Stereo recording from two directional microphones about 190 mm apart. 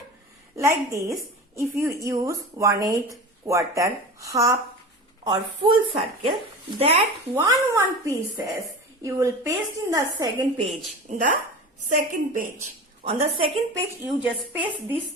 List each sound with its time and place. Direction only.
0.5 s a woman's voice: 15° right (ahead or behind)
5.5 s a woman's voice: 30° right (ahead or behind)
7.4 s a woman's voice: 15° right (ahead or behind)
11.1 s a woman's voice: 40° right (ahead or behind)
13.1 s a woman's voice: 30° right (ahead or behind)
14.0 s a woman's voice: 5° right (ahead or behind)